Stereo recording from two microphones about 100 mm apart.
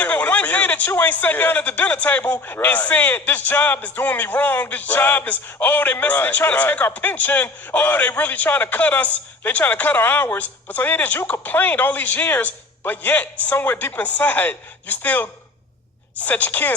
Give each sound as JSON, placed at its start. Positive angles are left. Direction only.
{"t": 0.0, "sound": "a man's voice", "side_deg": 15}